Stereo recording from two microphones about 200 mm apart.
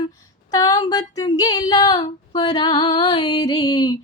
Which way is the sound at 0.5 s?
20° left (ahead or behind).